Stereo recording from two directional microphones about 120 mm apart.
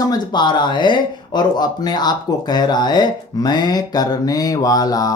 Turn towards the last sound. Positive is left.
turn(degrees=30)  # may be behind; listen again after turning